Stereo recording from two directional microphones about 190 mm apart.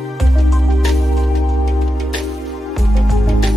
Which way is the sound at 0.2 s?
Centre (ahead or behind).